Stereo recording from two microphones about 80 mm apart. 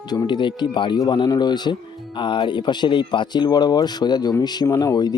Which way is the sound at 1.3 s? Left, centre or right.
Left.